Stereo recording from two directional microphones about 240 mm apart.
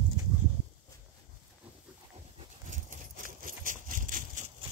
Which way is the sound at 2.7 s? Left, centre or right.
Right.